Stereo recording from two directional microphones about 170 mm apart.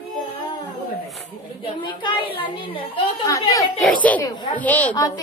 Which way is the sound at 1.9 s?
30° left (ahead or behind).